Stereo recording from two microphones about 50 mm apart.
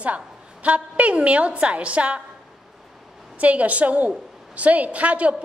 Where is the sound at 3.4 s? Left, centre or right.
Right.